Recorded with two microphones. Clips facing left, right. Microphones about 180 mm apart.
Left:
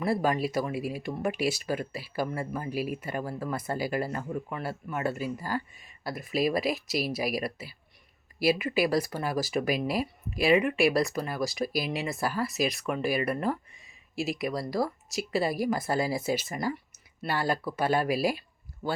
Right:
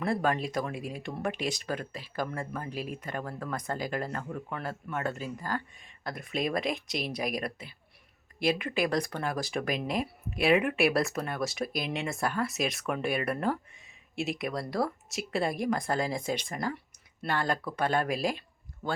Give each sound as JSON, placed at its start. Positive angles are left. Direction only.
{"t": 0.0, "sound": "speech", "side_deg": 5}